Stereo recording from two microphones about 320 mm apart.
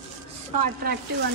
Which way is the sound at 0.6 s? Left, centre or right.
Right.